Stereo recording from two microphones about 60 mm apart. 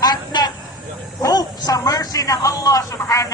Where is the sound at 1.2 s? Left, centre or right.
Left.